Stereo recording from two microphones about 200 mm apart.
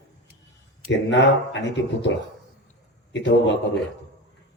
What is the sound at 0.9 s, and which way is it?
Speech, 65° left (ahead or behind).